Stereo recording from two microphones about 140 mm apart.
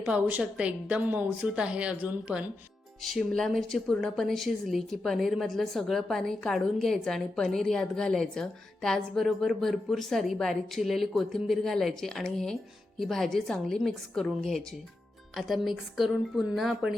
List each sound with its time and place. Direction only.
0.0 s a woman's voice: 10° right (ahead or behind)
3.0 s speech: centre (ahead or behind)